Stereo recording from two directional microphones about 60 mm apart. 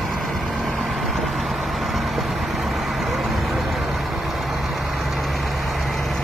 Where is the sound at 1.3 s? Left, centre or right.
Centre.